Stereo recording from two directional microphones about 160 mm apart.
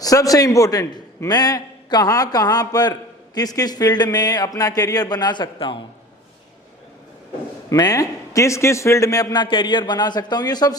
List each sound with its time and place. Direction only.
0.0 s a man's voice: 20° left (ahead or behind)
7.7 s a man's voice: 20° left (ahead or behind)